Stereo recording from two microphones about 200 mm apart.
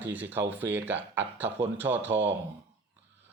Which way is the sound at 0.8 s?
10° right (ahead or behind).